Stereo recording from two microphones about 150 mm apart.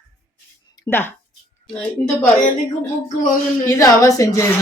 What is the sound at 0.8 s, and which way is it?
A woman's voice, 15° left (ahead or behind).